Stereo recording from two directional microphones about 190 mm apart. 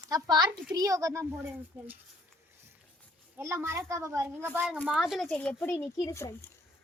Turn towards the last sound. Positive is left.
turn(degrees=15)  # may be behind; listen again after turning